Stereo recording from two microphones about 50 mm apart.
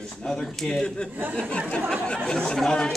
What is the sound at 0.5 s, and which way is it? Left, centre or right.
Speech, centre.